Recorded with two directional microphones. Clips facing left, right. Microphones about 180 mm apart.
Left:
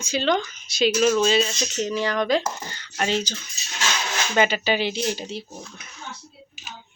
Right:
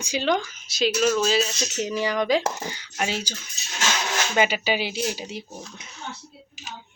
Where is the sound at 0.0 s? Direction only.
15° right (ahead or behind).